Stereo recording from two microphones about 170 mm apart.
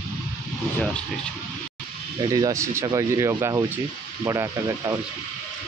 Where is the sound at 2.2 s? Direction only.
20° right (ahead or behind).